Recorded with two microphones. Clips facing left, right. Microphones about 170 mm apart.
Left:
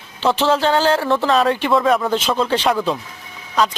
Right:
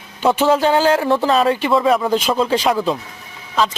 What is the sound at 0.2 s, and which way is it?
Speech, 10° right (ahead or behind).